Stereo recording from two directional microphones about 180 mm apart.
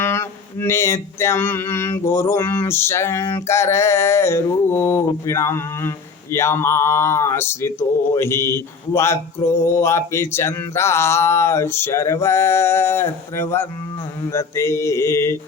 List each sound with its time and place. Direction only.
0.0 s speech: 15° left (ahead or behind)